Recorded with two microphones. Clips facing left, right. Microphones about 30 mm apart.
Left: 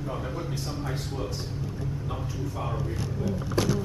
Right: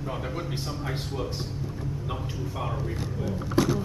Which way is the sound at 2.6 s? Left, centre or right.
Centre.